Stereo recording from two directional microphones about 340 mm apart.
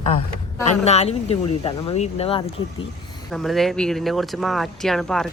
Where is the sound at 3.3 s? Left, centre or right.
Centre.